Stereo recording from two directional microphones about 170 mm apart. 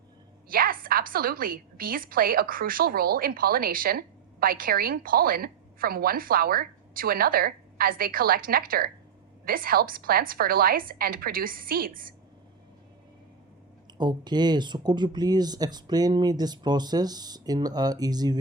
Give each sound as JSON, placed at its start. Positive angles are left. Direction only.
{"t": 0.4, "sound": "a woman's voice", "side_deg": -60}
{"t": 14.0, "sound": "speech", "side_deg": -25}